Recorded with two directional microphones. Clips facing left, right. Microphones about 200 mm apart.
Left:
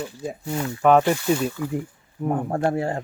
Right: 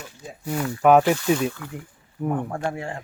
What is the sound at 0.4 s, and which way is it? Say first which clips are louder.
Speech: right 2 dB; 25° left (ahead or behind).